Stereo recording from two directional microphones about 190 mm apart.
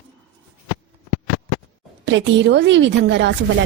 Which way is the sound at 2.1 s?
70° right (ahead or behind).